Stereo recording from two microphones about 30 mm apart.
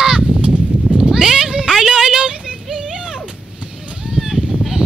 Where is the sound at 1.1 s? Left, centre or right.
Centre.